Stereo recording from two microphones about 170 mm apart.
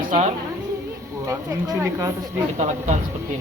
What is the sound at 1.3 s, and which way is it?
Speech, 20° right (ahead or behind).